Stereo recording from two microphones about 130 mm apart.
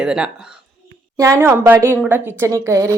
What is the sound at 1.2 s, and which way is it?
A woman's voice, 20° right (ahead or behind).